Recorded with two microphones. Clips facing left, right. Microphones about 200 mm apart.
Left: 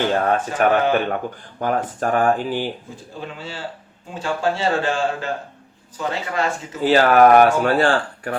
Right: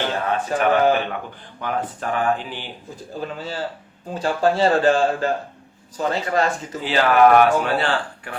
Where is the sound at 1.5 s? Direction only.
45° left (ahead or behind).